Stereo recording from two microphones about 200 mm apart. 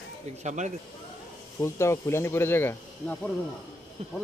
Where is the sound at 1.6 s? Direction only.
15° left (ahead or behind).